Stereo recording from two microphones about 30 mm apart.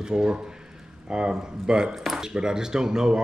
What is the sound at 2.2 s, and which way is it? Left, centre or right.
Speech, right.